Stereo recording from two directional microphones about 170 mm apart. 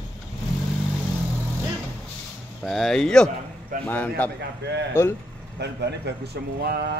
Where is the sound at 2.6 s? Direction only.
Centre (ahead or behind).